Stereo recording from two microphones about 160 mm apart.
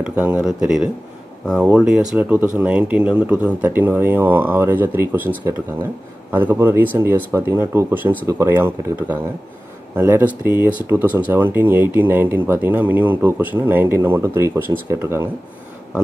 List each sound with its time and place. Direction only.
0.0 s speech: 10° right (ahead or behind)
6.3 s speech: 15° right (ahead or behind)